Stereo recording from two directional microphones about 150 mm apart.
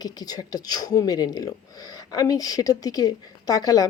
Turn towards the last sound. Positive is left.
turn(degrees=25)  # may be behind; listen again after turning